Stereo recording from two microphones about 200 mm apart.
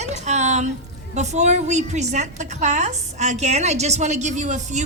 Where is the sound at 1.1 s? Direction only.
35° right (ahead or behind).